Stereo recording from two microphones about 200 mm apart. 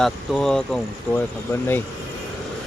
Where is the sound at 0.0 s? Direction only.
5° left (ahead or behind).